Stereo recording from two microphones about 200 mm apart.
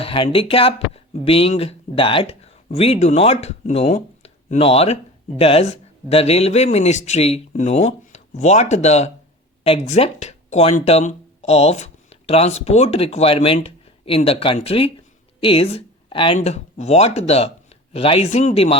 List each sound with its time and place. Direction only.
0.0 s speech: 25° left (ahead or behind)